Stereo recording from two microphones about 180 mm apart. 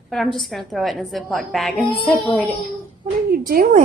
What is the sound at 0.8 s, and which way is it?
A woman's voice, centre (ahead or behind).